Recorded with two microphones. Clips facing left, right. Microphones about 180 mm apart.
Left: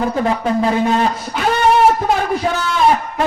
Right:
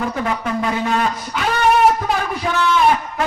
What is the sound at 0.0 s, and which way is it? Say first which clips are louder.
Speech: left 5 dB; 30° left (ahead or behind).